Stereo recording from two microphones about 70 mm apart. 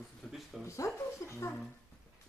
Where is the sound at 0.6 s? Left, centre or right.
Left.